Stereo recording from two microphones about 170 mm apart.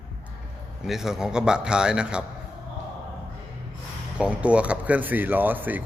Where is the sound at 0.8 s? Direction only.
5° right (ahead or behind).